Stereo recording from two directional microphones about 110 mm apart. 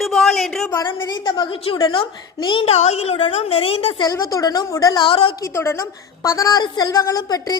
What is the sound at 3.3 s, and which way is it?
Speech, 60° left (ahead or behind).